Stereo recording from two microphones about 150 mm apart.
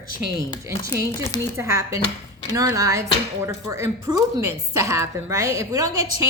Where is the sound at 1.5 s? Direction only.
20° right (ahead or behind).